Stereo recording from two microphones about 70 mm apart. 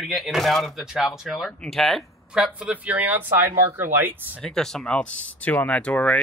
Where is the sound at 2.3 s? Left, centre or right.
Centre.